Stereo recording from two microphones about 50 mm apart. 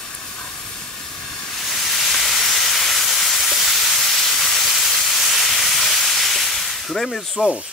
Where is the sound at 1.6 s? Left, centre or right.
Centre.